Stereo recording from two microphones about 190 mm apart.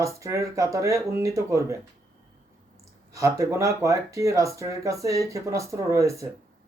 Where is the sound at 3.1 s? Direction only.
15° right (ahead or behind).